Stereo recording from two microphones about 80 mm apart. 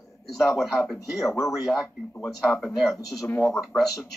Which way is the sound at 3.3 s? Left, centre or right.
Left.